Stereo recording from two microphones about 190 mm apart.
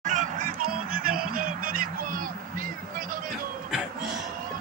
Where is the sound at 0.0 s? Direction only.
40° right (ahead or behind).